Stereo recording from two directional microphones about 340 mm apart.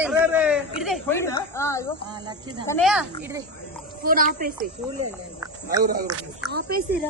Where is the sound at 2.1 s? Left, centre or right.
Centre.